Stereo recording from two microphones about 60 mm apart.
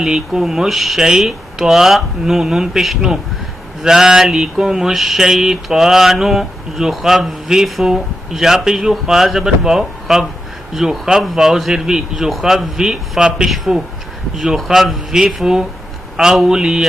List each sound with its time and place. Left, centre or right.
0.0 s speech: centre